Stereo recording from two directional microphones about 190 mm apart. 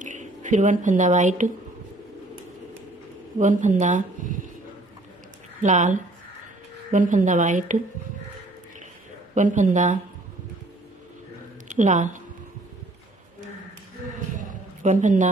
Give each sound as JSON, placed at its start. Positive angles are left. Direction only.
{"t": 0.0, "sound": "speech", "side_deg": -40}
{"t": 3.3, "sound": "speech", "side_deg": -40}
{"t": 5.6, "sound": "speech", "side_deg": -40}
{"t": 9.3, "sound": "speech", "side_deg": -40}
{"t": 11.6, "sound": "a woman's voice", "side_deg": -40}
{"t": 14.3, "sound": "a sound", "side_deg": -45}